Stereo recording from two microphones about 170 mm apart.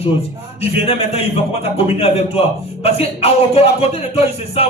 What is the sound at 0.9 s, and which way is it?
A man's voice, 35° left (ahead or behind).